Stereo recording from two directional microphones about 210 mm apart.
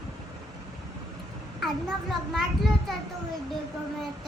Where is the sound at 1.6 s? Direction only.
Centre (ahead or behind).